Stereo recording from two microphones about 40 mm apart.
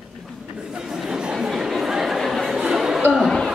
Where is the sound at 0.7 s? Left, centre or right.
Centre.